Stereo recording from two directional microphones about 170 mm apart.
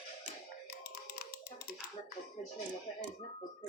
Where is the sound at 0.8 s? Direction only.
70° left (ahead or behind).